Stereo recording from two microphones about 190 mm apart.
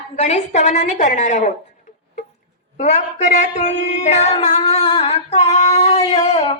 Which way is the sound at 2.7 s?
35° left (ahead or behind).